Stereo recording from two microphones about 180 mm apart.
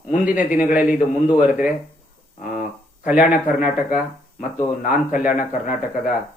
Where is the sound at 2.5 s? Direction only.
45° left (ahead or behind).